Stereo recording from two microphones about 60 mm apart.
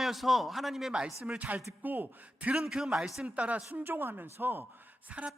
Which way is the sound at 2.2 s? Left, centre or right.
Centre.